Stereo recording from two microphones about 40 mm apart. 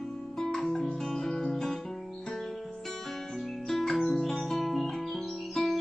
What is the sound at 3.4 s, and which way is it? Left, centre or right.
Music, centre.